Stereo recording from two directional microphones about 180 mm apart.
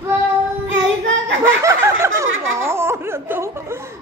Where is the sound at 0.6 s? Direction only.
90° right.